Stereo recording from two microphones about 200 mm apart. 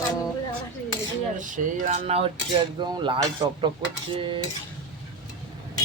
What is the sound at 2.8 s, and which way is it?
Music, 25° right (ahead or behind).